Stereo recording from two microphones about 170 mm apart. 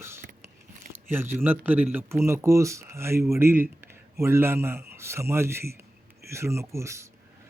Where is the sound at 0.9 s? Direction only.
10° right (ahead or behind).